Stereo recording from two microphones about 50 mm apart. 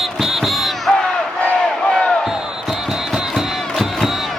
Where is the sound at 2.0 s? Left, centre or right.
Left.